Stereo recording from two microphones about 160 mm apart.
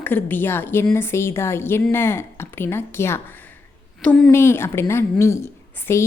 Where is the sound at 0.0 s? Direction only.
10° left (ahead or behind).